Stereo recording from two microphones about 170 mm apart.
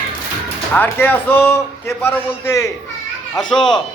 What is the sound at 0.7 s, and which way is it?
A man's voice, 10° left (ahead or behind).